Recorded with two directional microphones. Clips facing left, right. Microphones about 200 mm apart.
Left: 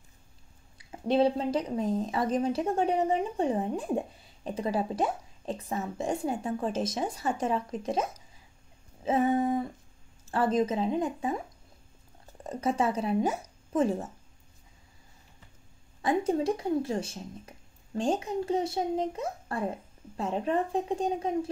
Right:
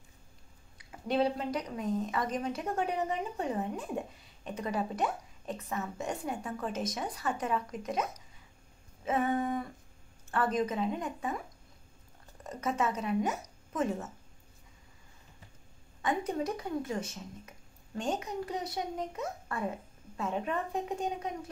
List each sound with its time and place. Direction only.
1.0 s speech: 30° left (ahead or behind)
12.4 s speech: 30° left (ahead or behind)
16.0 s speech: 30° left (ahead or behind)